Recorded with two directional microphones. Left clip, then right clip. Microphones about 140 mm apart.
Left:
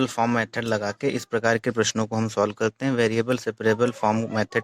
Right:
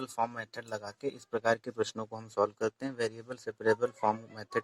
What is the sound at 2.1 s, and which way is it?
Speech, 50° left (ahead or behind).